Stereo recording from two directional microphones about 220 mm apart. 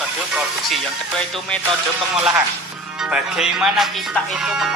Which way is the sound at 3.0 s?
5° right (ahead or behind).